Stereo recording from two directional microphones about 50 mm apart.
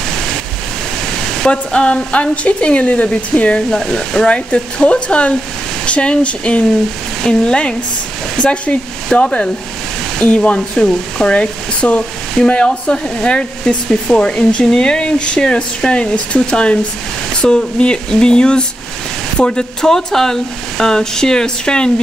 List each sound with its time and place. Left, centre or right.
1.4 s speech: centre
3.7 s speech: centre
4.3 s speech: left